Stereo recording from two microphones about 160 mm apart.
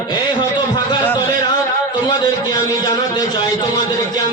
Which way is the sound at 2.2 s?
25° left (ahead or behind).